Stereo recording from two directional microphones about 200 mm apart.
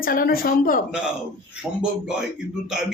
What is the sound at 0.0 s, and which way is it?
Speech, 45° left (ahead or behind).